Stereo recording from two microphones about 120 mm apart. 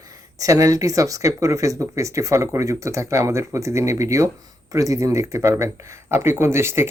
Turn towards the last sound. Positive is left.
turn(degrees=-20)  # may be behind; listen again after turning